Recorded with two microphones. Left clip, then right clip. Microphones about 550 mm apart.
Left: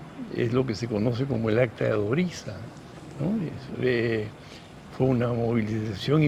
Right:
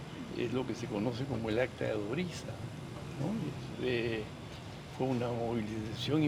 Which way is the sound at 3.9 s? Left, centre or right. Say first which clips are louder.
Left 9 dB; left.